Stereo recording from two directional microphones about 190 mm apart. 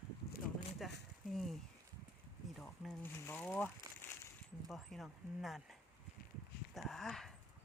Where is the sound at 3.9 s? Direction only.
15° right (ahead or behind).